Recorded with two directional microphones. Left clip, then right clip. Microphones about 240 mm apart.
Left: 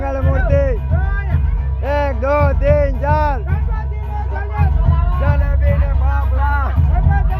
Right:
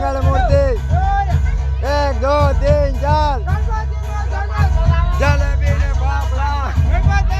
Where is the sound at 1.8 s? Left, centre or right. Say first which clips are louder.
Right 1 dB; centre.